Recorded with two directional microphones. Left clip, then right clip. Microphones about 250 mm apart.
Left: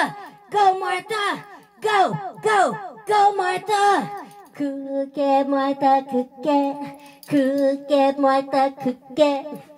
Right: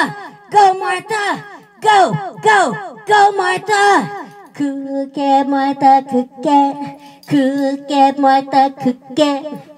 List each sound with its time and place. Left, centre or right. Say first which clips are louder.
0.0 s speech: right 5 dB; right